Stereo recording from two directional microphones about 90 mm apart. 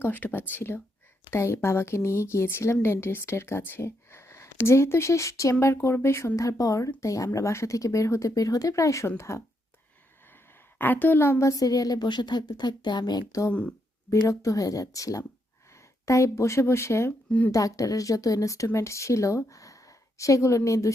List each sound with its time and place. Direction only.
0.0 s speech: 20° left (ahead or behind)
10.8 s a woman's voice: 20° left (ahead or behind); by 13.4 s 50° left (ahead or behind)
13.5 s speech: 15° left (ahead or behind)
14.1 s speech: 40° left (ahead or behind)